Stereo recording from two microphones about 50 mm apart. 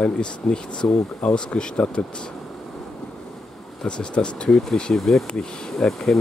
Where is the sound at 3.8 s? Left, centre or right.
Centre.